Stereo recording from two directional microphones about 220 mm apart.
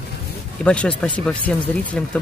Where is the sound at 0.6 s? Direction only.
5° left (ahead or behind).